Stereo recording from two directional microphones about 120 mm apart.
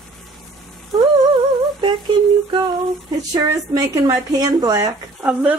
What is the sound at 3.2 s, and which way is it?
Speech, 35° right (ahead or behind).